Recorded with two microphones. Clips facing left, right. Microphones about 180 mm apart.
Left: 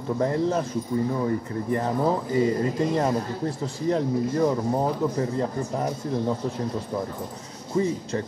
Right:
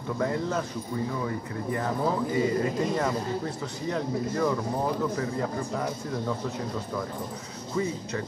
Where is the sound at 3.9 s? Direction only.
35° left (ahead or behind).